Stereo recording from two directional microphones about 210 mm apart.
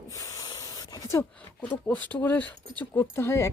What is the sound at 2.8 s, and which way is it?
Speech, 10° left (ahead or behind).